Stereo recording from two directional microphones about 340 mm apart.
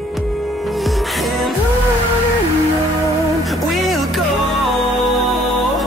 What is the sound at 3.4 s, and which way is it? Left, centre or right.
Music, centre.